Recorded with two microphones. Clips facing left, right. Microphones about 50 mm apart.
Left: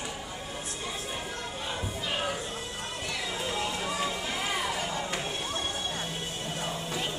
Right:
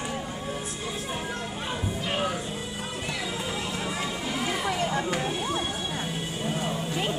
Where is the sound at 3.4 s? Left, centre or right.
Centre.